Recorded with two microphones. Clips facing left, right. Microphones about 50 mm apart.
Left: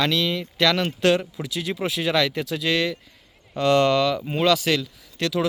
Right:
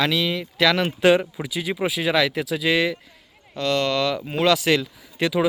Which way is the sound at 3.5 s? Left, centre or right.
Centre.